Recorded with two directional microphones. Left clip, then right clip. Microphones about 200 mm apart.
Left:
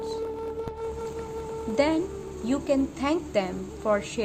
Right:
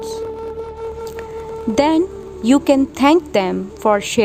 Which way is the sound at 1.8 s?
60° right (ahead or behind).